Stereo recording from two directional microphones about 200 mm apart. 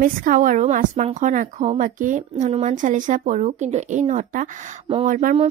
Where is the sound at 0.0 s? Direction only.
45° right (ahead or behind).